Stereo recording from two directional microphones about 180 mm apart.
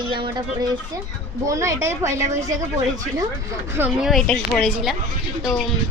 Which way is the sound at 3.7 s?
10° right (ahead or behind).